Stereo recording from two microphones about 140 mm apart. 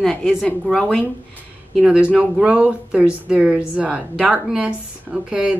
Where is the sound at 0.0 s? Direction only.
Centre (ahead or behind).